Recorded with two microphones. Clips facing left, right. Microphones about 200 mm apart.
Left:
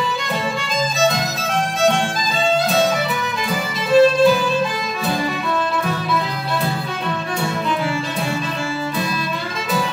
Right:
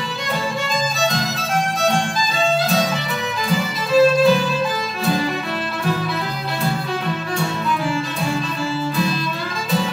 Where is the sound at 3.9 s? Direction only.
Centre (ahead or behind).